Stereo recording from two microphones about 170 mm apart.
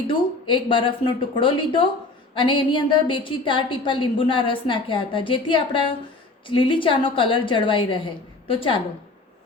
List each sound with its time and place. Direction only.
0.1 s a woman's voice: 30° left (ahead or behind)